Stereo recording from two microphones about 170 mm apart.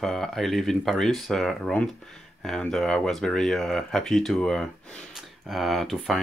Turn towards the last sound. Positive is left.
turn(degrees=0)  # may be behind; listen again after turning